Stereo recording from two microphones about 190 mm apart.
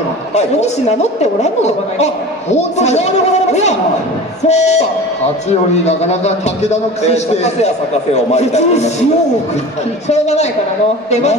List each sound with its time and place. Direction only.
0.3 s a man's voice: 35° left (ahead or behind)
4.5 s a man's voice: 35° left (ahead or behind)
5.9 s a man's voice: 35° left (ahead or behind)
10.0 s a man's voice: 35° left (ahead or behind)